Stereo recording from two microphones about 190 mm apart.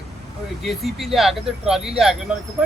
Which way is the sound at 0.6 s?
Centre (ahead or behind).